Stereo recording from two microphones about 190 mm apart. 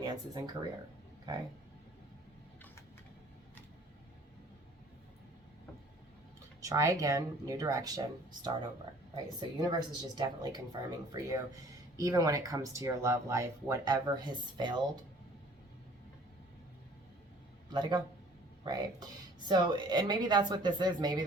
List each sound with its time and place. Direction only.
0.0 s speech: 20° right (ahead or behind)
6.6 s speech: 15° right (ahead or behind)
17.7 s a man's voice: 25° right (ahead or behind)